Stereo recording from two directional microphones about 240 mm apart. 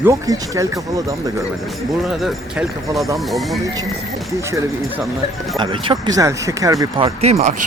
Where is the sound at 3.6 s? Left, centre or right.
Centre.